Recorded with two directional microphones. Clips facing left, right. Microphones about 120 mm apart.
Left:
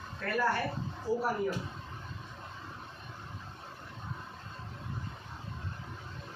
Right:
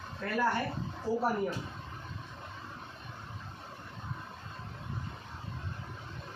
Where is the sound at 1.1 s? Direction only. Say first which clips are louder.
Even; centre (ahead or behind).